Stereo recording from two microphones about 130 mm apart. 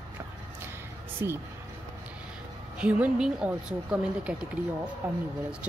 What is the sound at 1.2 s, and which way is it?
Speech, 20° right (ahead or behind).